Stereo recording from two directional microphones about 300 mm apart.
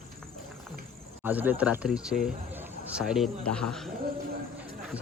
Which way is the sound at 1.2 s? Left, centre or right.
Centre.